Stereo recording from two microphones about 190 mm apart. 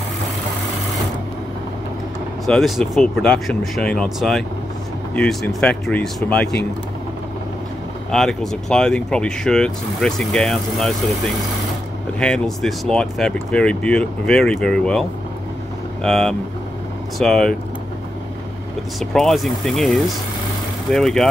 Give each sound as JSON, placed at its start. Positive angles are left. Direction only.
{"t": 2.4, "sound": "speech", "side_deg": 0}
{"t": 8.1, "sound": "speech", "side_deg": 0}
{"t": 18.9, "sound": "speech", "side_deg": 0}